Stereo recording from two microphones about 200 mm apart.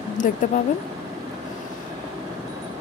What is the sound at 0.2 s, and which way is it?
Speech, 45° left (ahead or behind).